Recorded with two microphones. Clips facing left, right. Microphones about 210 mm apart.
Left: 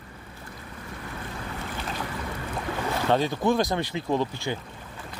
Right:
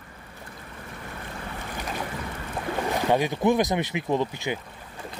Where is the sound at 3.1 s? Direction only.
15° right (ahead or behind).